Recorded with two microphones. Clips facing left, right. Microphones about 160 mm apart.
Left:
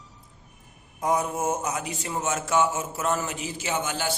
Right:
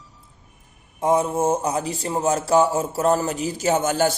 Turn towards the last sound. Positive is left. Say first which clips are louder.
# right 9 dB
turn(degrees=-45)  # may be behind; listen again after turning